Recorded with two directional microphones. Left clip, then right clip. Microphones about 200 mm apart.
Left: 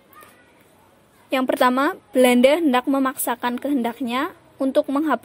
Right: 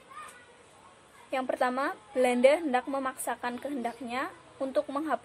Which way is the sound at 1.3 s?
50° left (ahead or behind).